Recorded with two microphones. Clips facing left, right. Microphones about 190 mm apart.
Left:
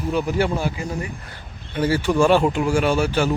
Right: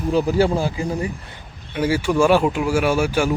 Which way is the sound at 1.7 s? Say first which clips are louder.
Even; 10° right (ahead or behind).